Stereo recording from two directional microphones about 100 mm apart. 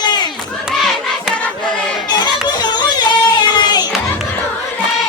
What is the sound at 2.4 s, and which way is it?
Music, 45° left (ahead or behind).